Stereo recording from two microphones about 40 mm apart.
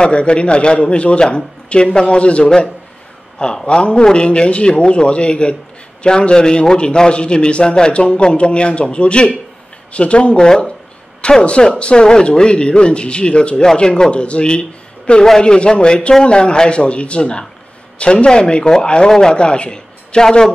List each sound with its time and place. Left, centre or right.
0.0 s a man's voice: left